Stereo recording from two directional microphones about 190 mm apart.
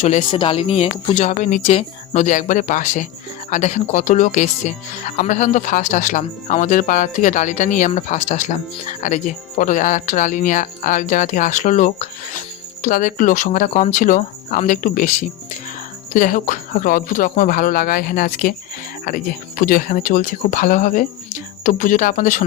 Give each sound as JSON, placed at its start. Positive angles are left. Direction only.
{"t": 0.0, "sound": "speech", "side_deg": 35}